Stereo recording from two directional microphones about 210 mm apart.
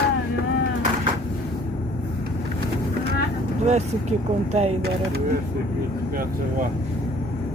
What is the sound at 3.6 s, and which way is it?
Speech, 35° right (ahead or behind).